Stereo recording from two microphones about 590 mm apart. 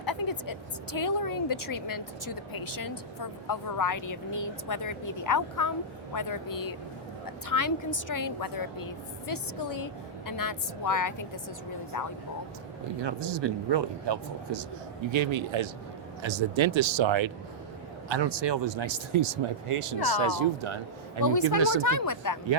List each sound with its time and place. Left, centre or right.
0.0 s vehicle: left
0.9 s a woman's voice: left
13.0 s speech: right
21.8 s speech: left